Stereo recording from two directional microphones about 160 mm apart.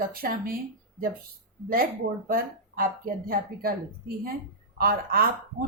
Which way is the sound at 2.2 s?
65° right (ahead or behind).